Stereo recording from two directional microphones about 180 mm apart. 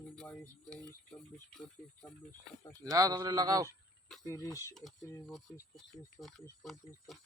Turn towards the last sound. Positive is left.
turn(degrees=0)  # may be behind; listen again after turning